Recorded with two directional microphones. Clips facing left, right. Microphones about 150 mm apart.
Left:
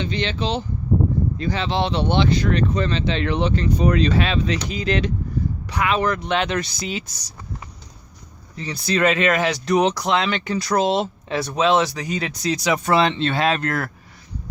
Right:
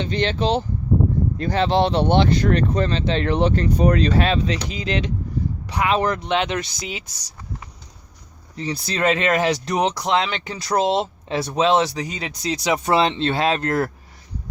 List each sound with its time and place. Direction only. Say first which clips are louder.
0.0 s speech: right 3 dB; 50° right (ahead or behind); by 7.3 s 15° right (ahead or behind)
8.5 s speech: left 3 dB; 30° right (ahead or behind)